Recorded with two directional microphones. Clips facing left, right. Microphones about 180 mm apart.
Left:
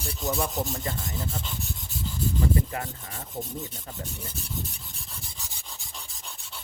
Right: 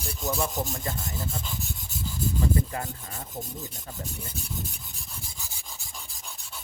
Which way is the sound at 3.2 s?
Centre (ahead or behind).